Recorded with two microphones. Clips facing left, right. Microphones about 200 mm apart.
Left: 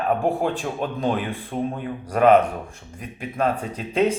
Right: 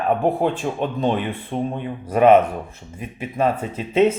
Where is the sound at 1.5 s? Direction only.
40° right (ahead or behind).